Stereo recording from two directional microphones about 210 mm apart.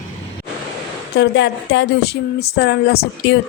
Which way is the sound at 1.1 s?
60° left (ahead or behind).